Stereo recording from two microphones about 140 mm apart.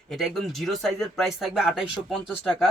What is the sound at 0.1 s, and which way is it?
Speech, centre (ahead or behind).